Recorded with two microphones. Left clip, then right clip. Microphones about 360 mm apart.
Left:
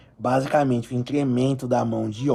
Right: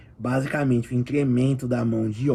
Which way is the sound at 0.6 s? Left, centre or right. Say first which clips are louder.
Left 1 dB; left.